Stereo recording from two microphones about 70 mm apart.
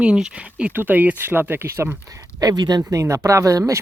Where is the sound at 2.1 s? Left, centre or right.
Right.